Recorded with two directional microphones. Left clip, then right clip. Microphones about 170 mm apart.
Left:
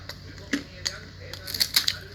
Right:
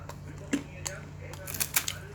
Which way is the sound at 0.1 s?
15° right (ahead or behind).